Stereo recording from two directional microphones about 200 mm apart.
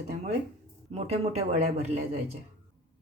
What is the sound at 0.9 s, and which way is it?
Speech, 30° right (ahead or behind).